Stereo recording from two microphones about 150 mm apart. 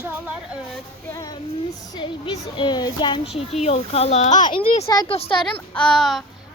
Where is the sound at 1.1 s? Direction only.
25° left (ahead or behind).